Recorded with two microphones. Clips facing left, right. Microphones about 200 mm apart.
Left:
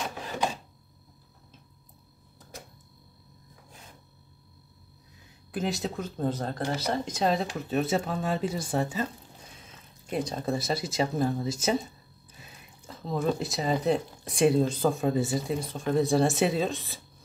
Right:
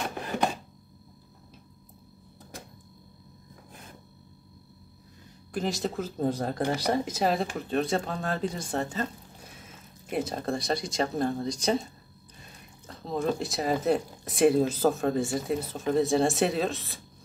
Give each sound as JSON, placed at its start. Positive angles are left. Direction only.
{"t": 5.5, "sound": "speech", "side_deg": 0}
{"t": 9.7, "sound": "speech", "side_deg": -5}